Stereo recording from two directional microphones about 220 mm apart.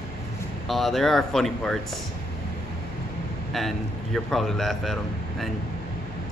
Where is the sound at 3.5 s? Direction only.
Centre (ahead or behind).